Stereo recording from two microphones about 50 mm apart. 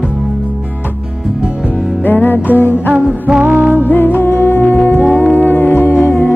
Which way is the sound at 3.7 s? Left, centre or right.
Left.